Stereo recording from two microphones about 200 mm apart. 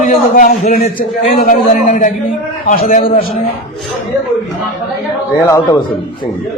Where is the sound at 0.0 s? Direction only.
40° left (ahead or behind).